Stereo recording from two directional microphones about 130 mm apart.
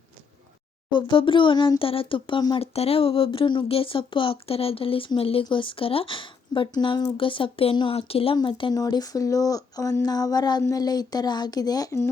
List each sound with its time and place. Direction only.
0.9 s speech: 40° left (ahead or behind)
2.6 s speech: 50° left (ahead or behind)
8.7 s speech: 30° left (ahead or behind)